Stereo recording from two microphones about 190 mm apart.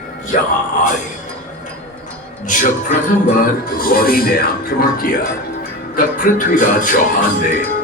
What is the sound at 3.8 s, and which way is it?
Speech, 50° left (ahead or behind).